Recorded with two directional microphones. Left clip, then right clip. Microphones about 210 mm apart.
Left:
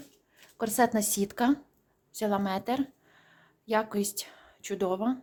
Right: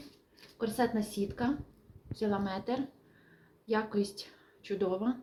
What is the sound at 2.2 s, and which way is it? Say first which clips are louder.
Speech: left 5 dB; 40° left (ahead or behind).